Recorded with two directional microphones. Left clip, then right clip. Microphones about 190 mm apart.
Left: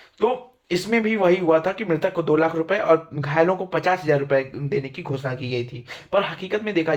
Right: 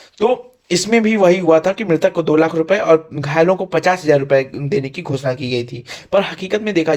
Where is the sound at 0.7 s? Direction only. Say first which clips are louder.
Right 7 dB; 40° right (ahead or behind).